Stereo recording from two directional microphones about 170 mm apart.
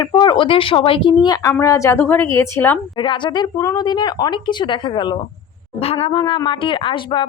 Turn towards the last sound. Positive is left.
turn(degrees=30)  # may be behind; listen again after turning